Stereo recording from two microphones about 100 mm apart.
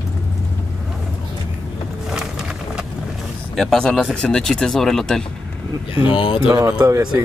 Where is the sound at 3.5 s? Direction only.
5° left (ahead or behind).